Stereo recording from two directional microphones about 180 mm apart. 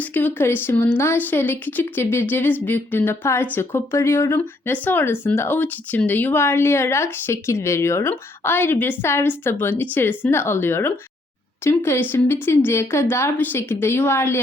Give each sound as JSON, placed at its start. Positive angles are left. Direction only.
{"t": 0.0, "sound": "speech", "side_deg": 10}